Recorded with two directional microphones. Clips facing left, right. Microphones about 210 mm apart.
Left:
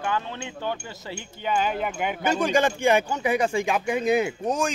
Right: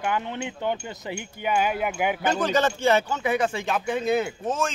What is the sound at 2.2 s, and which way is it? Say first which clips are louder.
Speech: left 2 dB; 10° left (ahead or behind).